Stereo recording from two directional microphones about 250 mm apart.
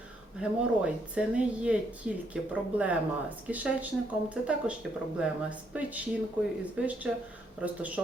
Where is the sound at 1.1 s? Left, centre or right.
Centre.